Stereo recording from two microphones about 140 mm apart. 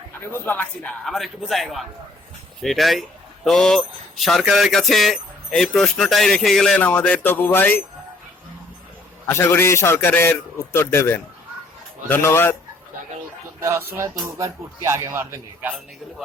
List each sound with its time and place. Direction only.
0.3 s speech: 15° left (ahead or behind)
9.2 s a man's voice: 15° left (ahead or behind)
13.6 s speech: 20° right (ahead or behind)